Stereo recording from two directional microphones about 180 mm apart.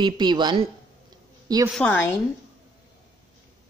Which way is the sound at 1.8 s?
10° left (ahead or behind).